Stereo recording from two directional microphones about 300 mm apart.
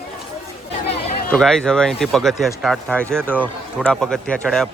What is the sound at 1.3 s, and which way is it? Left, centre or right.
A man's voice, centre.